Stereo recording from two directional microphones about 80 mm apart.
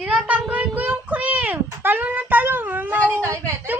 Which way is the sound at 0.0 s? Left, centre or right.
Centre.